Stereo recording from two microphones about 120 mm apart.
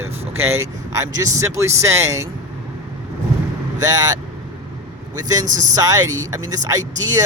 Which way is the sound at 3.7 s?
30° right (ahead or behind).